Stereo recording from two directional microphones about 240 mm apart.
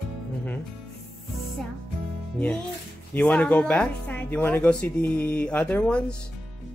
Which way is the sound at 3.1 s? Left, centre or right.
Centre.